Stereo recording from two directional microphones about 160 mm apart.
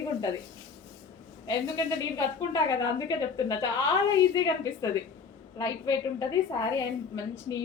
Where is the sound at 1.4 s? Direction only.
20° left (ahead or behind).